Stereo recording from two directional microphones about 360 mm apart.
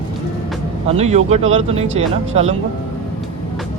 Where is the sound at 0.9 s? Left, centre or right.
Centre.